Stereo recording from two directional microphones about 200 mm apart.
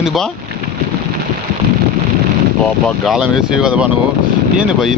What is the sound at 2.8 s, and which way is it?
Speech, centre (ahead or behind).